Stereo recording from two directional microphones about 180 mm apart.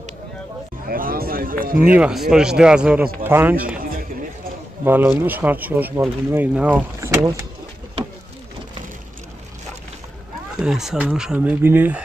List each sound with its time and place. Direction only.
0.8 s a sound: 55° right (ahead or behind)
2.0 s speech: 5° right (ahead or behind)
4.8 s speech: 10° right (ahead or behind)
10.5 s speech: centre (ahead or behind)